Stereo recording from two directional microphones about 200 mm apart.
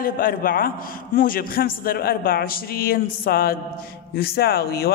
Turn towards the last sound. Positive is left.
turn(degrees=50)  # may be behind; listen again after turning